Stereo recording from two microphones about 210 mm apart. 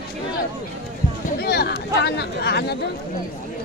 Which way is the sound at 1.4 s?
50° left (ahead or behind).